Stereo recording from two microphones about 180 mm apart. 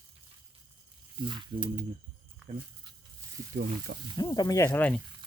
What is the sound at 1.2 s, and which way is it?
Speech, 25° right (ahead or behind).